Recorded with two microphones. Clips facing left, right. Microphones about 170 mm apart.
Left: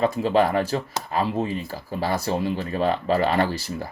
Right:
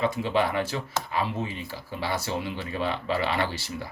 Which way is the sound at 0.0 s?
40° left (ahead or behind).